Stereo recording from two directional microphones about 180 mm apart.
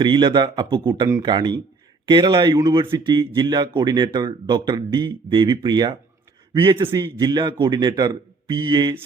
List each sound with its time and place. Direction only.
0.0 s speech: 25° right (ahead or behind)